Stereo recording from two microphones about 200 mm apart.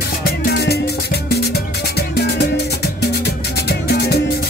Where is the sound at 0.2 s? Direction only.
55° left (ahead or behind).